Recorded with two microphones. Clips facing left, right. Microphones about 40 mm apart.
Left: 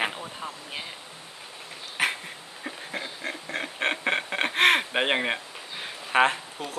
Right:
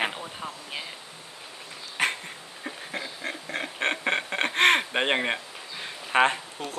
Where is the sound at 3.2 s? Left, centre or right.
Centre.